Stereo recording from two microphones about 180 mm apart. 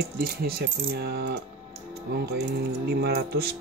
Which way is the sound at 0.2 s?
60° right (ahead or behind).